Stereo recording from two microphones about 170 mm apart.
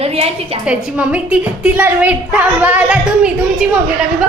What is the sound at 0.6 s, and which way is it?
A woman's voice, 5° right (ahead or behind).